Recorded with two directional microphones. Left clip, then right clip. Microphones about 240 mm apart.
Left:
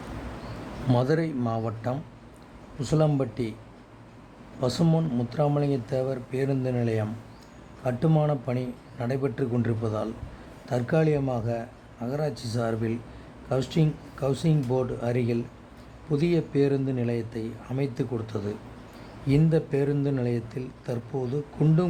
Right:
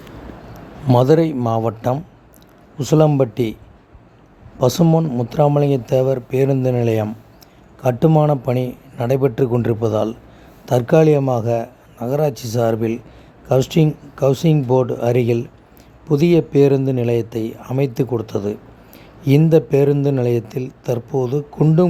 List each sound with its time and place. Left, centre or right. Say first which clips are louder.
0.9 s speech: right 12 dB; right
4.6 s speech: right 11 dB; right